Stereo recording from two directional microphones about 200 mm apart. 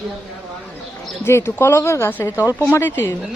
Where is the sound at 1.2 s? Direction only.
10° left (ahead or behind).